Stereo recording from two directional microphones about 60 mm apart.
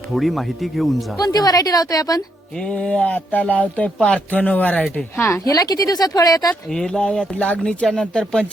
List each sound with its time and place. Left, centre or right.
0.1 s speech: centre
1.2 s speech: left
2.6 s a sound: centre
3.9 s speech: centre
4.3 s a sound: left
5.5 s speech: left
6.7 s speech: centre
7.3 s a sound: left
7.6 s speech: centre